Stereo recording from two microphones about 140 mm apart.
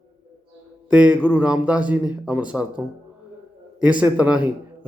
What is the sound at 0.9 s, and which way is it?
A man's voice, 10° right (ahead or behind).